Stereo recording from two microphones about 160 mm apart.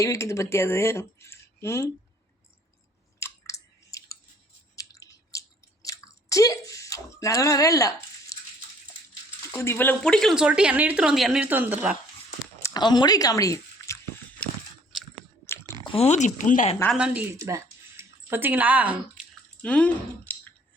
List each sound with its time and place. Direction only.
0.0 s speech: 20° left (ahead or behind)
3.2 s chewing: 20° left (ahead or behind)
9.5 s speech: 15° left (ahead or behind); by 11.9 s 10° right (ahead or behind)
12.6 s speech: 25° left (ahead or behind)
15.8 s speech: 35° left (ahead or behind); by 16.7 s 50° left (ahead or behind)
16.9 s a woman's voice: 5° right (ahead or behind)
17.3 s a sound: 20° right (ahead or behind)
19.6 s speech: 10° left (ahead or behind)